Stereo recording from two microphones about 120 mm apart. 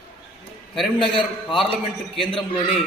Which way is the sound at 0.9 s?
45° left (ahead or behind).